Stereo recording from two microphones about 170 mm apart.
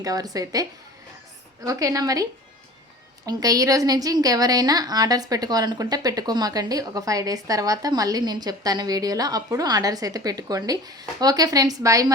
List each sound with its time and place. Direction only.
0.0 s a woman's voice: 20° right (ahead or behind)
3.2 s a woman's voice: 20° right (ahead or behind)